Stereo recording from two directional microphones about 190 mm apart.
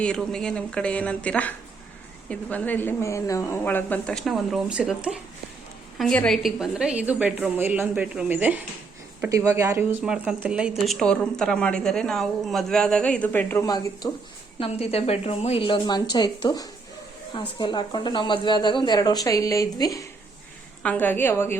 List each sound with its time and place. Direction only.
0.0 s a woman's voice: 5° left (ahead or behind); by 14.1 s 20° left (ahead or behind)
14.6 s a woman's voice: 30° left (ahead or behind); by 21.6 s 10° left (ahead or behind)